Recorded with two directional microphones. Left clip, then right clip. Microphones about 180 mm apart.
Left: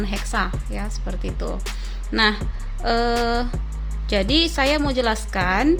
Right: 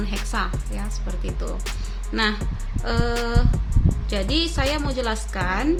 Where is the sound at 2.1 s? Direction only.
40° left (ahead or behind).